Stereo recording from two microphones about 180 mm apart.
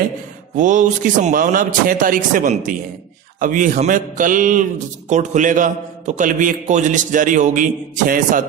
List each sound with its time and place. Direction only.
0.6 s a man's voice: 45° right (ahead or behind)